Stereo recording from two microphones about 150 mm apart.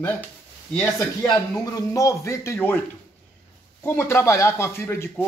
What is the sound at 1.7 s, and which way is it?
A man's voice, 20° left (ahead or behind).